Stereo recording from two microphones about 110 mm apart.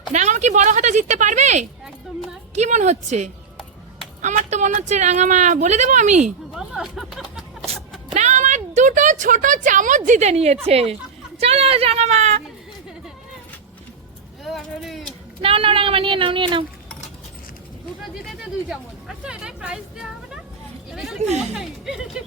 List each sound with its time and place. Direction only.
0.1 s a woman's voice: 90° right
6.5 s music: 5° right (ahead or behind)
8.1 s a sound: 90° right
10.2 s a woman's voice: 85° right
14.4 s vehicle: centre (ahead or behind)
15.4 s a woman's voice: 55° right (ahead or behind)
18.3 s speech: 5° right (ahead or behind)
20.9 s a sound: 5° right (ahead or behind)
21.3 s speech: 5° right (ahead or behind)